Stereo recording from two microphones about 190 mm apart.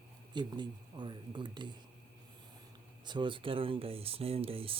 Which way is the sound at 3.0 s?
25° right (ahead or behind).